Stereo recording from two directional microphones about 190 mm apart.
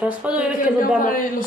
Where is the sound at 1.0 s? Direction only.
45° left (ahead or behind).